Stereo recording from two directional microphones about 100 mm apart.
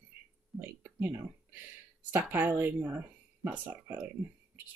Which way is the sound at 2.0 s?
20° right (ahead or behind).